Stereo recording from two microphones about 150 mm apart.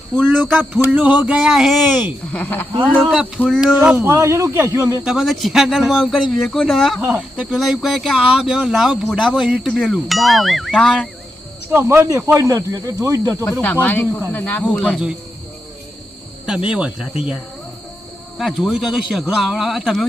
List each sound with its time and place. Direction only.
0.6 s a sound: 10° right (ahead or behind)
1.9 s a sound: 10° right (ahead or behind)
2.3 s speech: 10° left (ahead or behind)
2.8 s speech: 5° right (ahead or behind)
4.0 s speech: 20° right (ahead or behind)
5.0 s speech: centre (ahead or behind)
7.0 s a sound: 10° right (ahead or behind)
7.5 s speech: centre (ahead or behind)
11.7 s speech: 15° right (ahead or behind)
13.4 s speech: 15° left (ahead or behind)
16.6 s speech: 5° right (ahead or behind)
18.3 s speech: centre (ahead or behind)